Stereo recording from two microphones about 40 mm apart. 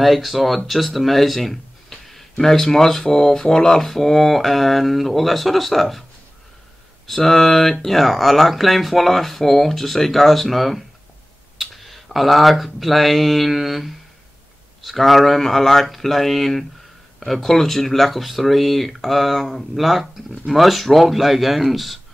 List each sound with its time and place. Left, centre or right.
0.0 s speech: centre
7.1 s speech: centre